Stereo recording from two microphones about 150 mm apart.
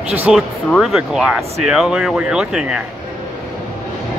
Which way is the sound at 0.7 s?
Centre (ahead or behind).